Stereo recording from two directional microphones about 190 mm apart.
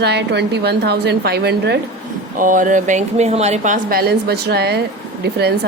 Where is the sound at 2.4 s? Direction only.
45° right (ahead or behind).